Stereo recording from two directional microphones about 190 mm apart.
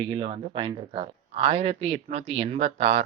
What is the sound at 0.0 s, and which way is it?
A man's voice, 25° right (ahead or behind).